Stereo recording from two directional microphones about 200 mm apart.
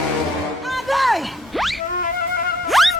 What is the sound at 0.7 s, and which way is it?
Music, centre (ahead or behind).